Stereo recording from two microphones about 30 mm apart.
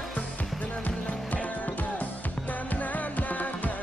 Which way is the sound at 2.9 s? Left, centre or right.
Left.